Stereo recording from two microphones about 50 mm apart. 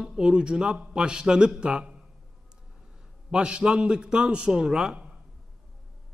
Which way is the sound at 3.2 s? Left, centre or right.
Centre.